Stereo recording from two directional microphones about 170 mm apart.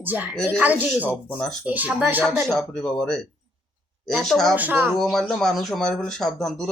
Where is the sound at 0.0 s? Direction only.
10° right (ahead or behind).